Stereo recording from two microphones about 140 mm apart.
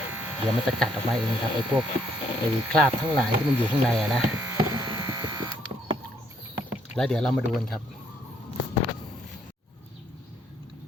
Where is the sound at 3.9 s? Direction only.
Centre (ahead or behind).